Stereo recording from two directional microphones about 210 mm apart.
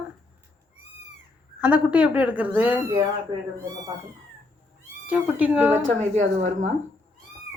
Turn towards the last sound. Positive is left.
turn(degrees=-35)  # may be behind; listen again after turning